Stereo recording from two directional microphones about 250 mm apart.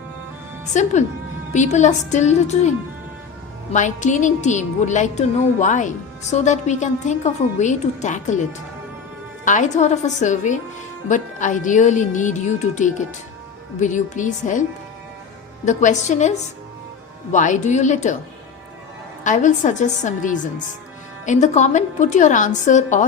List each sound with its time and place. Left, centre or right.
0.7 s a woman's voice: left
3.7 s a woman's voice: left
9.4 s a woman's voice: left
15.6 s a woman's voice: left
17.3 s a woman's voice: left
19.2 s a woman's voice: left